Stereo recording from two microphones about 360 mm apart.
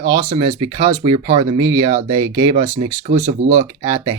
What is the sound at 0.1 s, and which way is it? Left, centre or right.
Speech, centre.